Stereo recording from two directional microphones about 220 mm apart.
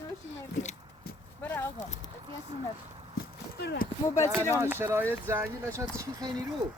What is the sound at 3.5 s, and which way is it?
Speech, 45° left (ahead or behind).